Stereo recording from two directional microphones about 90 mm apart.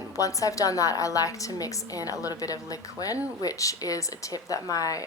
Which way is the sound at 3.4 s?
40° left (ahead or behind).